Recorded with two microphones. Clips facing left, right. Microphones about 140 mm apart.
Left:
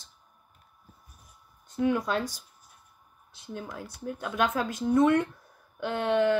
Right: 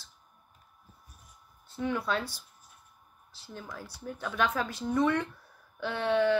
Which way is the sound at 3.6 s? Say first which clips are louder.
Left 4 dB; 15° left (ahead or behind).